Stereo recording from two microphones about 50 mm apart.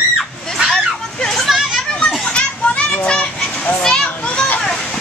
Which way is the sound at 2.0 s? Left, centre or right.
Left.